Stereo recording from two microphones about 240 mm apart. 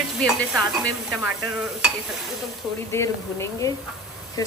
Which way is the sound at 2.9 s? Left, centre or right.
Centre.